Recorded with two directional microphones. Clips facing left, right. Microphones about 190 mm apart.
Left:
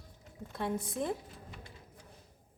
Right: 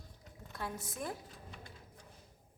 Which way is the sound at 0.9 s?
25° left (ahead or behind).